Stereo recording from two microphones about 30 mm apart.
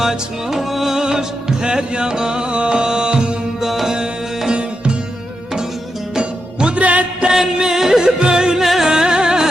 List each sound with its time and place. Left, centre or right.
0.0 s music: centre
0.9 s music: right
3.6 s music: centre
6.7 s music: right
7.3 s music: centre
8.0 s music: right
8.6 s music: centre
8.9 s music: right